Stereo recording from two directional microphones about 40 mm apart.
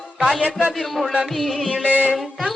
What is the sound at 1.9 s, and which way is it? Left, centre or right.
Music, right.